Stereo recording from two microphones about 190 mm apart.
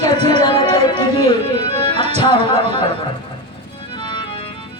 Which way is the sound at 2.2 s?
25° left (ahead or behind).